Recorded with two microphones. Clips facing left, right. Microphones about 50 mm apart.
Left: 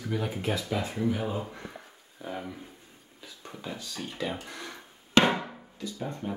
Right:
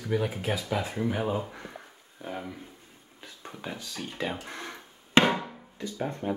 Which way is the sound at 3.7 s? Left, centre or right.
Centre.